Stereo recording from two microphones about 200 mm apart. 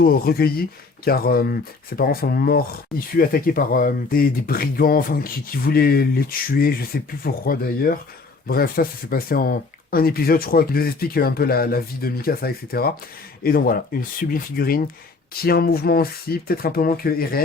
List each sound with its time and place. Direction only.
0.0 s speech: 50° left (ahead or behind)